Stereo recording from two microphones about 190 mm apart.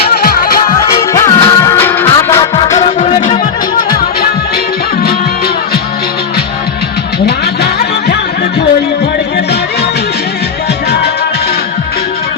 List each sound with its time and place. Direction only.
0.1 s music: 55° left (ahead or behind)
1.1 s music: 20° left (ahead or behind)
2.6 s music: 35° left (ahead or behind)
7.3 s music: 60° left (ahead or behind)